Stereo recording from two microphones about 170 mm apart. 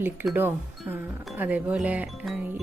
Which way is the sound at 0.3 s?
10° right (ahead or behind).